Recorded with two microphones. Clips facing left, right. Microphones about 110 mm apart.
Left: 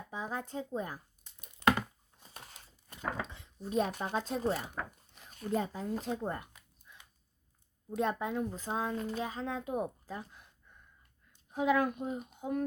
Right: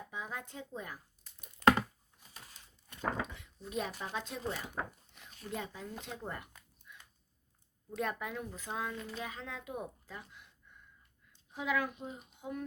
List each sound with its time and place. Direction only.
0.1 s a child's voice: 35° left (ahead or behind)
1.6 s a sound: 20° left (ahead or behind)
3.3 s dishes: 35° left (ahead or behind)
4.1 s a child's voice: 40° left (ahead or behind)
6.9 s a sound: 30° left (ahead or behind)
7.9 s a child's voice: 30° left (ahead or behind); by 12.6 s 45° left (ahead or behind)